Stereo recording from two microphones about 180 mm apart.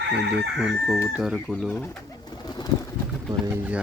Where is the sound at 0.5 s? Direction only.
Centre (ahead or behind).